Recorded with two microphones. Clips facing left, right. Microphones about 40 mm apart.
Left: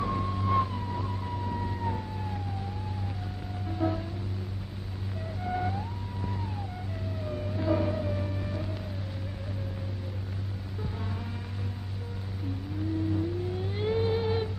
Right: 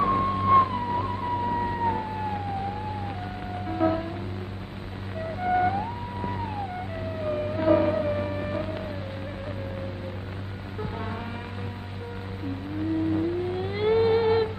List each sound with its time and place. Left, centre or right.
0.0 s a sound: right
3.6 s music: right
5.4 s music: right
7.2 s vehicle: right
13.1 s music: right